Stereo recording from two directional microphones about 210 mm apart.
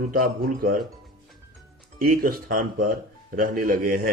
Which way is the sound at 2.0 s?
45° right (ahead or behind).